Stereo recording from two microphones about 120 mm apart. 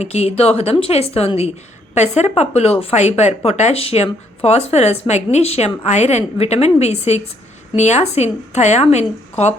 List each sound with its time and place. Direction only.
0.0 s a woman's voice: 65° left (ahead or behind)
2.0 s a woman's voice: 70° left (ahead or behind)